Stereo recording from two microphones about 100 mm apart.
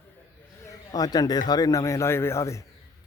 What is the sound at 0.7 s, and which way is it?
A man's voice, 40° left (ahead or behind).